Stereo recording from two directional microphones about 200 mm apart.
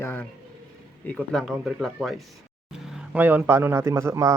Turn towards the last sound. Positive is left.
turn(degrees=-15)  # may be behind; listen again after turning